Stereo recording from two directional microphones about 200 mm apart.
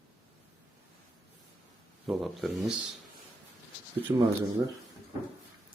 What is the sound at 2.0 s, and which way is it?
Speech, centre (ahead or behind).